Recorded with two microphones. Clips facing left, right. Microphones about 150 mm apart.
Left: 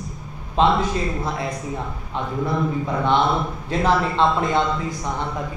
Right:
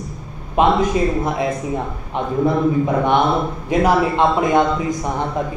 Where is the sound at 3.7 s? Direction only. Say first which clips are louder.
Right 5 dB; 15° right (ahead or behind).